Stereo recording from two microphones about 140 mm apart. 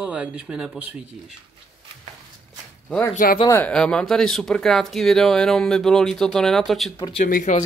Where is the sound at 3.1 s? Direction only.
80° left.